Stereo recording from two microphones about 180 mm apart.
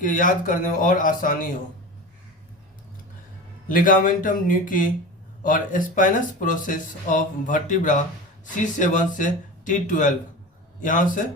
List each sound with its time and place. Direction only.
0.0 s speech: 50° left (ahead or behind)
3.7 s a man's voice: 50° left (ahead or behind)